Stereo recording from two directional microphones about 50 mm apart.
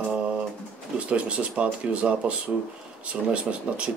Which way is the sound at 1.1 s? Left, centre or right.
Right.